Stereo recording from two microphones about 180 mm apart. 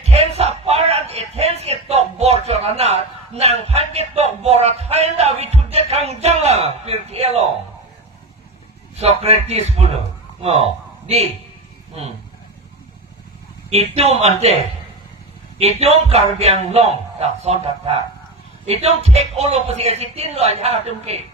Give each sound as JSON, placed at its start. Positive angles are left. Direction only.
{"t": 0.1, "sound": "a sound", "side_deg": -35}
{"t": 9.0, "sound": "speech", "side_deg": -35}
{"t": 11.0, "sound": "a man's voice", "side_deg": -35}
{"t": 13.7, "sound": "speech", "side_deg": -35}
{"t": 15.8, "sound": "speech", "side_deg": -35}